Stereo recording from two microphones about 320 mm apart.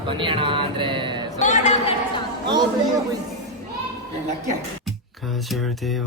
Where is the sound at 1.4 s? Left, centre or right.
Left.